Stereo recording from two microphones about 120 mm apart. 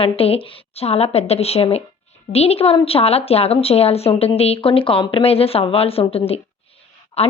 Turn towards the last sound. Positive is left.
turn(degrees=60)  # may be behind; listen again after turning